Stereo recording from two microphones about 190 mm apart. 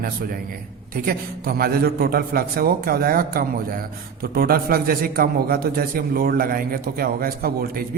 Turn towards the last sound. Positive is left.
turn(degrees=-50)  # may be behind; listen again after turning